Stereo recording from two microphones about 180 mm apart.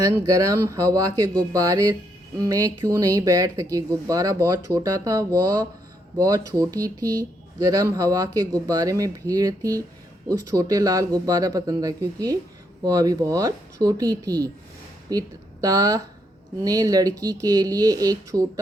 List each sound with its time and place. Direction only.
0.0 s speech: 20° right (ahead or behind)